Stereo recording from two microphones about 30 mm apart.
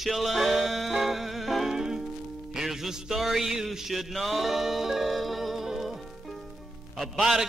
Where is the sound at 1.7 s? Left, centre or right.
Centre.